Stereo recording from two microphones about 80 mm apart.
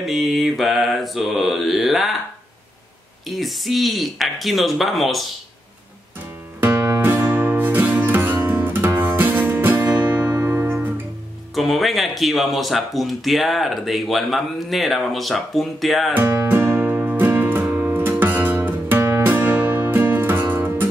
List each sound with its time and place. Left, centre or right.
0.0 s speech: centre
3.3 s speech: centre
6.6 s music: right
11.5 s speech: centre
16.2 s music: right